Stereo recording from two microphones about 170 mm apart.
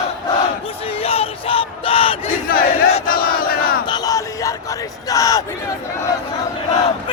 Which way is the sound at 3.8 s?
25° left (ahead or behind).